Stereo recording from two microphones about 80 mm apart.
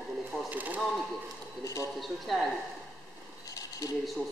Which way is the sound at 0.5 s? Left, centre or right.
Right.